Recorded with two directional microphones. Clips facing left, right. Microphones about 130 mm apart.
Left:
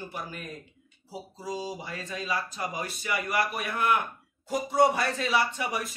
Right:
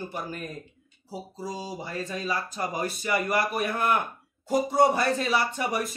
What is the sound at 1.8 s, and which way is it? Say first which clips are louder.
A man's voice: right 4 dB; 40° right (ahead or behind).